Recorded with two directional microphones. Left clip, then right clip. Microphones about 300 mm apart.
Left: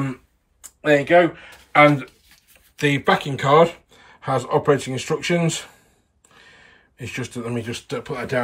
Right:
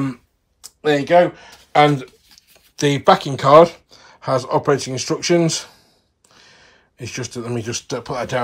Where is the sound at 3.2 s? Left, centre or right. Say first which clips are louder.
Right 5 dB; right.